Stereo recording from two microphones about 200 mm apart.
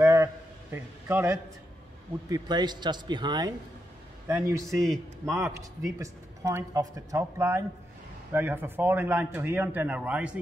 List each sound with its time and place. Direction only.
0.0 s a sound: 10° right (ahead or behind)
2.2 s a man's voice: 20° right (ahead or behind)
4.6 s a man's voice: centre (ahead or behind)
5.2 s speech: 15° right (ahead or behind)